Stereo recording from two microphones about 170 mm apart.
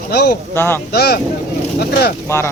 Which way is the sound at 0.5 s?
15° left (ahead or behind).